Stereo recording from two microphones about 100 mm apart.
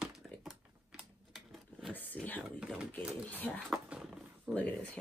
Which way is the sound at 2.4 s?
10° right (ahead or behind).